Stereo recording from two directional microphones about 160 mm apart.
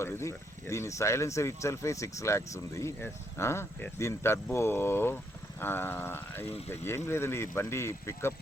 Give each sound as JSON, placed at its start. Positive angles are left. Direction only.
{"t": 0.0, "sound": "speech", "side_deg": 15}